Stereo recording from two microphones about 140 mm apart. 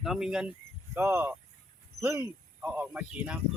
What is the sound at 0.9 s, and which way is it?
Speech, 15° right (ahead or behind).